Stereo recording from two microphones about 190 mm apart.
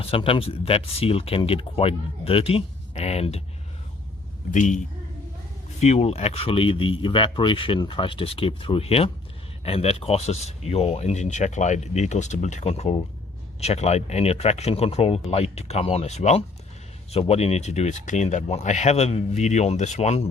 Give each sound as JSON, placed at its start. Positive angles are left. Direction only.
{"t": 0.0, "sound": "speech", "side_deg": 30}
{"t": 4.5, "sound": "speech", "side_deg": 40}
{"t": 5.8, "sound": "speech", "side_deg": 35}